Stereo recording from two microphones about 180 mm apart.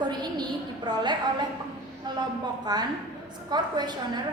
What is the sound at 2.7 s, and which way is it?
A woman's voice, 20° right (ahead or behind).